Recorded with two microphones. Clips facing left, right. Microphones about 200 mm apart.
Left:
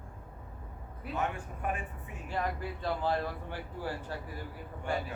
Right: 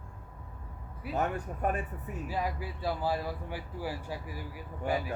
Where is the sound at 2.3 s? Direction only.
5° right (ahead or behind).